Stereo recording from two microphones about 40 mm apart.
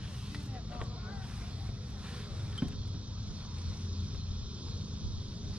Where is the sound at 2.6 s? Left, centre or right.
Right.